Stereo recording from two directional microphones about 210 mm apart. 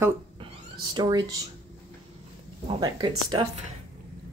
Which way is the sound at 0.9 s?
20° right (ahead or behind).